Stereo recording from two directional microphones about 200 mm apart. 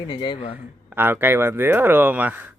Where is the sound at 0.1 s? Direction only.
20° left (ahead or behind).